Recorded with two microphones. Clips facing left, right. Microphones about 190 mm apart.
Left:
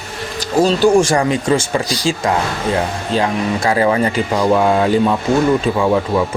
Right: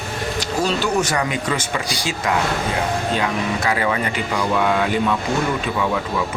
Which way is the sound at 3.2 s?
35° left (ahead or behind).